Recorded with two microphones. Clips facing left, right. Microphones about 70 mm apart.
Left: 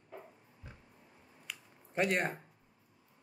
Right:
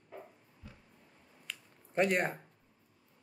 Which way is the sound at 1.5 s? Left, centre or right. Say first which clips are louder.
Right 3 dB; centre.